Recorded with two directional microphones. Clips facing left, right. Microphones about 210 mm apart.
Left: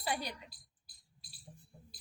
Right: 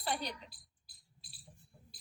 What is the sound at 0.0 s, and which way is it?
Speech, 10° left (ahead or behind).